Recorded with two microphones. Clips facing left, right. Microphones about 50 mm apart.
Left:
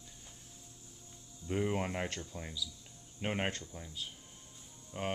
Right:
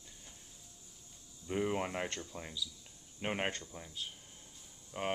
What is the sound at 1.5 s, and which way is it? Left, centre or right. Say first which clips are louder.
Speech: left 1 dB; centre.